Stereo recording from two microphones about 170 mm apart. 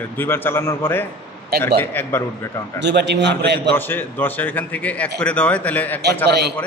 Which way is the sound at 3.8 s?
10° left (ahead or behind).